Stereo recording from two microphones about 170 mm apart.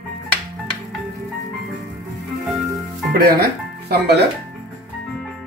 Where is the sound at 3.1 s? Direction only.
65° right (ahead or behind).